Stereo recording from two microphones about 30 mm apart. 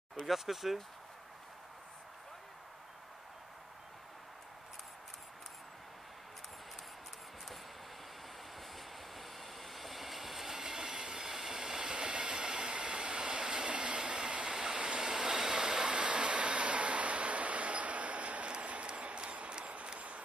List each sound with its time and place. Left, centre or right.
0.3 s speech: centre
8.5 s train: centre
10.7 s train: right
12.0 s train: right
13.7 s train: right
15.9 s a sound: right